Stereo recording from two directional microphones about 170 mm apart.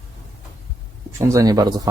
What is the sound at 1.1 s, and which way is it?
Speech, 20° right (ahead or behind).